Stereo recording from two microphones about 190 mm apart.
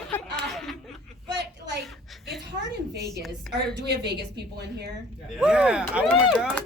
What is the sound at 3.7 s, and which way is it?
Speech, 60° right (ahead or behind).